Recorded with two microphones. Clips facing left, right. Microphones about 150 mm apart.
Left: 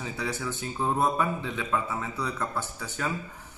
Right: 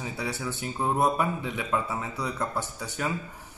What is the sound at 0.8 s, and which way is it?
Speech, 15° right (ahead or behind).